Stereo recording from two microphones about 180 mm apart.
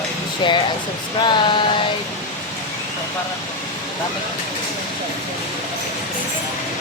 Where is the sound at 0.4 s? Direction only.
25° left (ahead or behind).